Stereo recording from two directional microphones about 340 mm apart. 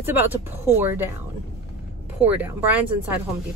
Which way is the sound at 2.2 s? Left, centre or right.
Centre.